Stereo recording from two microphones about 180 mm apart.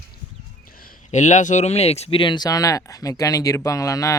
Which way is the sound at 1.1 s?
40° left (ahead or behind).